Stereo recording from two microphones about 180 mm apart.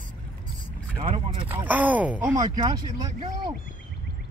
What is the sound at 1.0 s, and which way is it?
Speech, 30° right (ahead or behind).